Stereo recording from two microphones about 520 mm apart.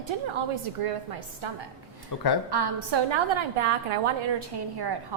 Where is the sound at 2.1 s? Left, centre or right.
Left.